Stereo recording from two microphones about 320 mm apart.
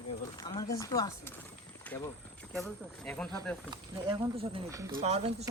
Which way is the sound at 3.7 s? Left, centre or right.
Centre.